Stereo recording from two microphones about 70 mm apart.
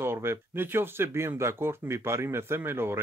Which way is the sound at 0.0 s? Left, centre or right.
Right.